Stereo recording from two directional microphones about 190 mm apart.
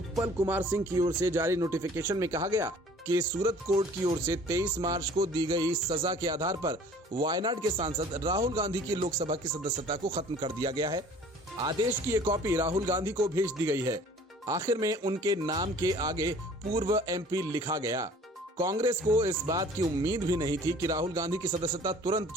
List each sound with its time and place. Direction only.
0.2 s speech: 15° right (ahead or behind)
9.0 s speech: 30° right (ahead or behind)